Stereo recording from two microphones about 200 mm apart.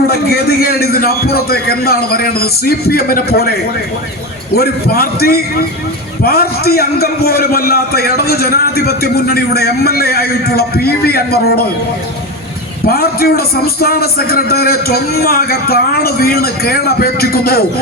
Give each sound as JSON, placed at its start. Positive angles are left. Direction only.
{"t": 0.1, "sound": "a man's voice", "side_deg": 50}
{"t": 12.9, "sound": "a man's voice", "side_deg": 50}